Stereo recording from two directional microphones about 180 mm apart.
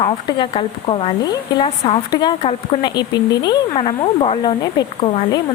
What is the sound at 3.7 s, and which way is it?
Speech, 30° left (ahead or behind).